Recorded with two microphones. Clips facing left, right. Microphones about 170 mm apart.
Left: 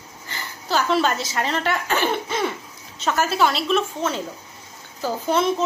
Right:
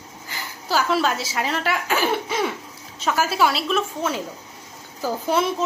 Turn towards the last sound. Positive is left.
turn(degrees=-10)  # may be behind; listen again after turning